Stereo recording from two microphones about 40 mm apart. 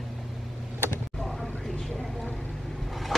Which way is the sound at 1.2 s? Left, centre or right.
Centre.